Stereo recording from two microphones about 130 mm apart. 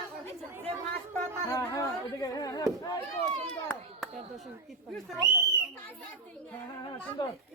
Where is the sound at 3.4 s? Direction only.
5° left (ahead or behind).